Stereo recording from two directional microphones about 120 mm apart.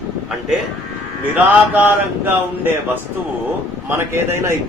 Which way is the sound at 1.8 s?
15° right (ahead or behind).